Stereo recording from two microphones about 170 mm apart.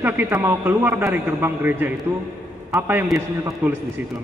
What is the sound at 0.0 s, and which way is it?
A man's voice, 15° right (ahead or behind).